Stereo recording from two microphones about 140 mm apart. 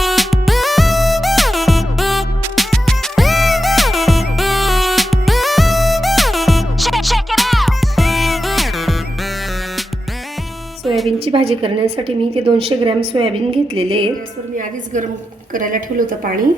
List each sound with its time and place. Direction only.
0.0 s music: centre (ahead or behind)
10.8 s music: centre (ahead or behind)
11.3 s a woman's voice: 40° right (ahead or behind)
15.5 s a woman's voice: 80° right